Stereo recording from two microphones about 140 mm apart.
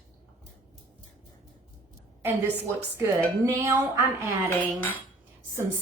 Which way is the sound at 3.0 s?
20° right (ahead or behind).